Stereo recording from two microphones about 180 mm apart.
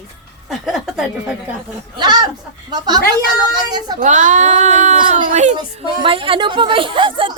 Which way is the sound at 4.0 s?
45° right (ahead or behind).